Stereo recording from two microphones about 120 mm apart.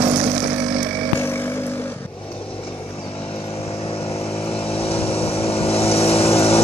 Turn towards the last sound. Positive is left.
turn(degrees=55)  # may be behind; listen again after turning